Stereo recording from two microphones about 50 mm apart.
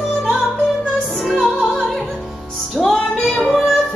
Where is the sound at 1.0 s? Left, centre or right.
Centre.